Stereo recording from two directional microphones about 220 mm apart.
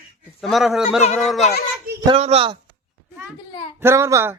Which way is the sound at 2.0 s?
25° right (ahead or behind).